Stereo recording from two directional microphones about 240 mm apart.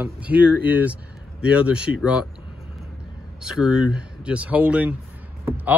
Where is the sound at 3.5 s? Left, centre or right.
Centre.